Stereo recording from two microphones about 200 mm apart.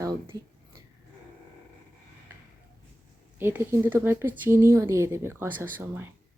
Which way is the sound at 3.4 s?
10° right (ahead or behind).